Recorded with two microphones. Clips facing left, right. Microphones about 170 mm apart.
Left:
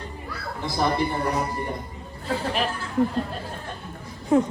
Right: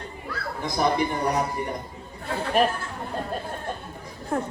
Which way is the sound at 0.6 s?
15° right (ahead or behind).